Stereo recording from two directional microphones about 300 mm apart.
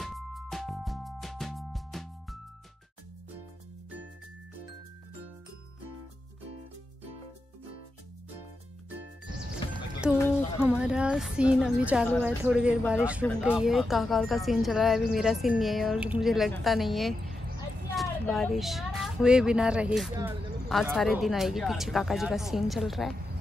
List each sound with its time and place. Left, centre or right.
0.0 s music: centre
9.6 s music: centre
10.3 s speech: centre